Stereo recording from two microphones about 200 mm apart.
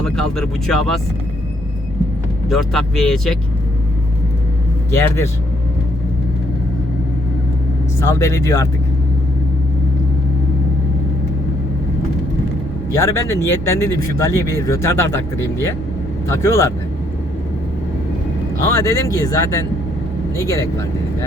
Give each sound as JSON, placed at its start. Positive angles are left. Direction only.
{"t": 0.0, "sound": "speech", "side_deg": 5}
{"t": 2.5, "sound": "speech", "side_deg": 0}
{"t": 4.9, "sound": "speech", "side_deg": 15}
{"t": 8.0, "sound": "speech", "side_deg": 15}
{"t": 12.9, "sound": "speech", "side_deg": 15}
{"t": 18.6, "sound": "speech", "side_deg": 15}